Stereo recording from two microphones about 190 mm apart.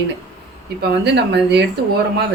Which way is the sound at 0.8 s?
60° right (ahead or behind).